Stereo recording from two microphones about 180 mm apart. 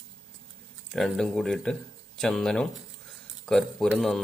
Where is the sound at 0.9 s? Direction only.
Centre (ahead or behind).